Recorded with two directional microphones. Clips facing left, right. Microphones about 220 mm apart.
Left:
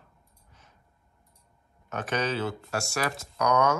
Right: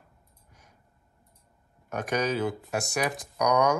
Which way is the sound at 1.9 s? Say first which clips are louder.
Right 2 dB; 10° right (ahead or behind).